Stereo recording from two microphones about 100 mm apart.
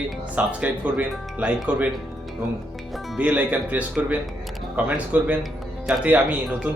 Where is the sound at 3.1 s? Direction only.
15° right (ahead or behind).